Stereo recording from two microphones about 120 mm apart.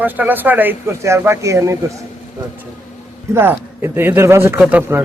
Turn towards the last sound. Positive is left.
turn(degrees=-20)  # may be behind; listen again after turning